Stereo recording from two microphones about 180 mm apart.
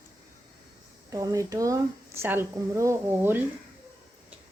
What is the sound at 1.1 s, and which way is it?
Speech, 20° right (ahead or behind).